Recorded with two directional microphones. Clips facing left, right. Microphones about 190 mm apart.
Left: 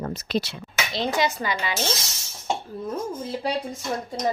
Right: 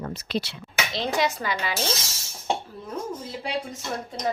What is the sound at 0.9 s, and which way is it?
Speech, centre (ahead or behind).